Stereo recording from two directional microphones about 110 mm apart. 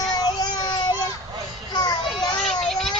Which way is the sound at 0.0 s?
40° left (ahead or behind).